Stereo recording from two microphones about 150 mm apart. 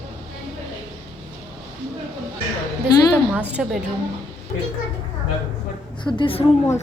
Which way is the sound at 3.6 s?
5° right (ahead or behind).